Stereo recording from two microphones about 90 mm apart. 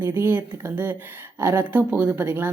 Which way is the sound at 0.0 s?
25° right (ahead or behind).